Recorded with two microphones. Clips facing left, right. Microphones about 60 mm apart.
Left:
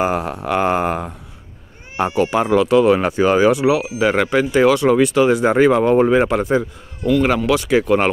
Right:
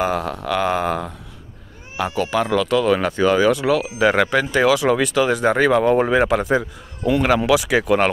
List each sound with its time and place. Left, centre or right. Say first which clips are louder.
0.0 s speech: left 2 dB; left; by 8.0 s centre